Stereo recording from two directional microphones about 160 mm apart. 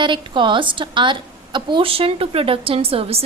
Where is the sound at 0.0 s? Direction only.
30° right (ahead or behind).